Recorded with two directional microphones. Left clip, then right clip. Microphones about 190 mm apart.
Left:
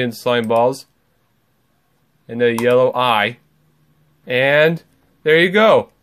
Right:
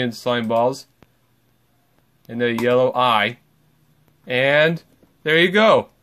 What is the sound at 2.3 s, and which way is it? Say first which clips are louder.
Speech: left 4 dB; 10° left (ahead or behind).